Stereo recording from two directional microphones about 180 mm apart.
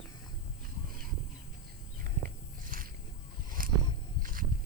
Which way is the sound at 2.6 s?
50° right (ahead or behind).